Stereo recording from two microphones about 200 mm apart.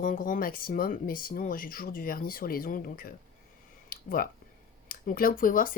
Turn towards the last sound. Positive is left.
turn(degrees=45)  # may be behind; listen again after turning